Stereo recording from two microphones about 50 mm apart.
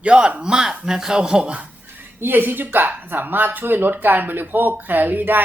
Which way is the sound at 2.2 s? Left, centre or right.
Right.